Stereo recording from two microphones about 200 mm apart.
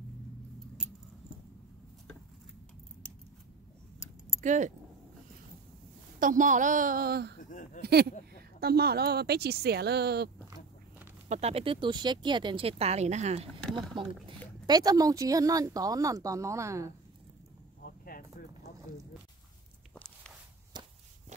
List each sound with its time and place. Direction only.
4.4 s speech: 40° right (ahead or behind)
6.1 s a woman's voice: 40° right (ahead or behind)
7.3 s a sound: 40° left (ahead or behind)
7.8 s a woman's voice: 55° right (ahead or behind)
11.2 s speech: 35° right (ahead or behind)
13.6 s a sound: 5° left (ahead or behind)
14.7 s a woman's voice: 20° right (ahead or behind)
17.8 s insect: 45° left (ahead or behind)
19.9 s walk: 5° left (ahead or behind)
20.7 s walk: 20° right (ahead or behind)